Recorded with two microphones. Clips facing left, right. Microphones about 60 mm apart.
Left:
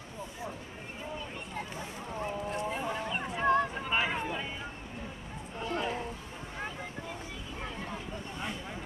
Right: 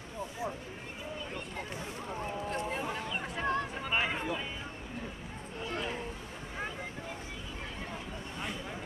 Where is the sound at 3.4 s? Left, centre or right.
Centre.